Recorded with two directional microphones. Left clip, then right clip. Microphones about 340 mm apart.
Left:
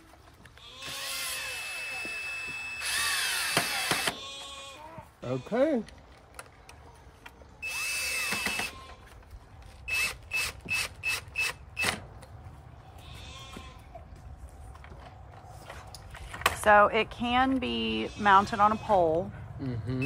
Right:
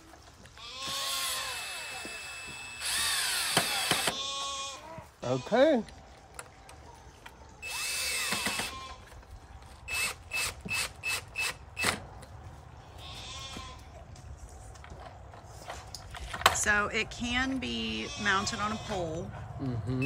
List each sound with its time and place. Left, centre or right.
0.8 s drill: centre
5.5 s speech: centre
7.2 s drill: centre
9.8 s tools: centre
16.3 s a sound: centre
16.6 s speech: centre